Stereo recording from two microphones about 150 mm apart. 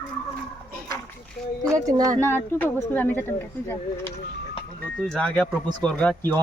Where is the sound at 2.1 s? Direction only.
15° left (ahead or behind).